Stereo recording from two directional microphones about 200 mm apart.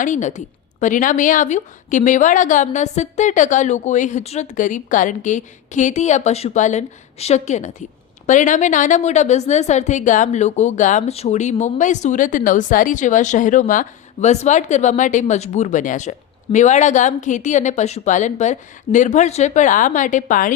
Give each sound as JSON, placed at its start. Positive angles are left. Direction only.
{"t": 0.0, "sound": "a woman's voice", "side_deg": 40}